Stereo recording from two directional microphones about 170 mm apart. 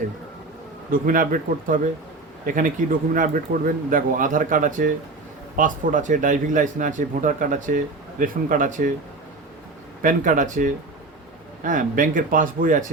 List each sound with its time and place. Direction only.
0.9 s speech: 55° right (ahead or behind)
10.0 s speech: 50° right (ahead or behind)